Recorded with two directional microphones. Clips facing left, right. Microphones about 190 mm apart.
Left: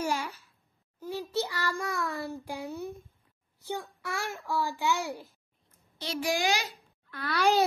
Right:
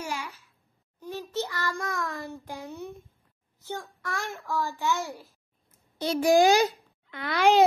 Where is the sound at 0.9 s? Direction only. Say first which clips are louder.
Left 1 dB; 10° left (ahead or behind).